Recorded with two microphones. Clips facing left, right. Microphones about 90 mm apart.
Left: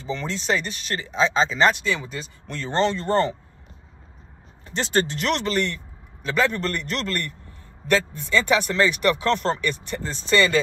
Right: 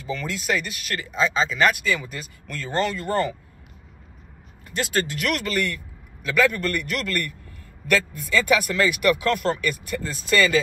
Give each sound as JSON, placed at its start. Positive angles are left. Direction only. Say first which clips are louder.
{"t": 0.0, "sound": "speech", "louder": "left 1 dB", "side_deg": 30}
{"t": 4.6, "sound": "speech", "louder": "left 2 dB", "side_deg": 30}